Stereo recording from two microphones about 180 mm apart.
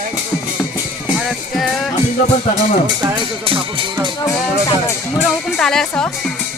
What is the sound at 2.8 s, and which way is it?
Speech, 25° right (ahead or behind).